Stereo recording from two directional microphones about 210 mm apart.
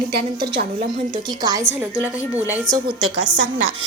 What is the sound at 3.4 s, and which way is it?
Speech, 65° right (ahead or behind).